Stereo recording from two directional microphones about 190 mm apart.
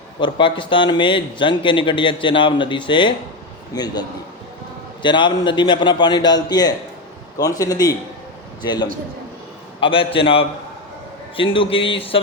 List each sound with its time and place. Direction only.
0.2 s speech: 25° left (ahead or behind)
5.0 s speech: 25° left (ahead or behind)